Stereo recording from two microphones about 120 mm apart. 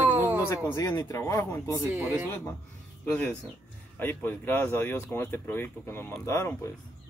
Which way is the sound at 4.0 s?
15° left (ahead or behind).